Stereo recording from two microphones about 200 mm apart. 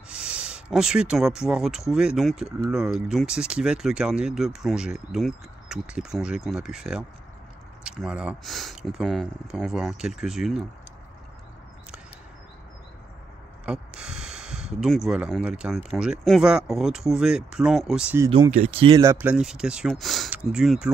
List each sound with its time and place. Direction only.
0.1 s speech: 5° right (ahead or behind)
13.7 s a sound: 5° right (ahead or behind)
15.0 s speech: 5° right (ahead or behind)
18.2 s speech: 15° right (ahead or behind)
18.6 s speech: 30° right (ahead or behind)
18.9 s speech: 10° right (ahead or behind)